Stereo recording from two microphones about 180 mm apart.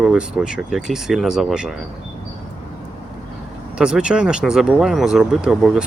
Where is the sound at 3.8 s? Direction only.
5° right (ahead or behind).